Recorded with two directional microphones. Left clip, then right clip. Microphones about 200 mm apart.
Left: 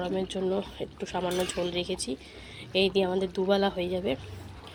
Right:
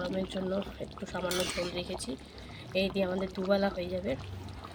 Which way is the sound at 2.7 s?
20° left (ahead or behind).